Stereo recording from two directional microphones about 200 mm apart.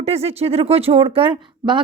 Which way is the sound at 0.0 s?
30° right (ahead or behind).